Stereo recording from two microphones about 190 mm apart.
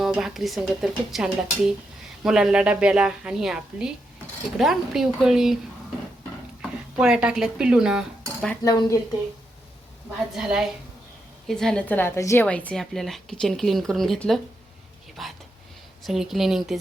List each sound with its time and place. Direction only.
0.0 s a woman's voice: centre (ahead or behind)
6.6 s speech: 5° right (ahead or behind)
8.6 s speech: 20° left (ahead or behind)
10.3 s a woman's voice: 5° right (ahead or behind)
15.1 s a sound: centre (ahead or behind)
16.0 s a woman's voice: centre (ahead or behind)